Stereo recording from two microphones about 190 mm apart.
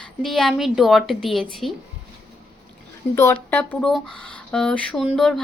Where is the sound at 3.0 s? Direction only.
5° left (ahead or behind).